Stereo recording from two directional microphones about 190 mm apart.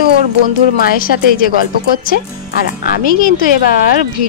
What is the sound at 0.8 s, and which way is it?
Speech, 50° left (ahead or behind).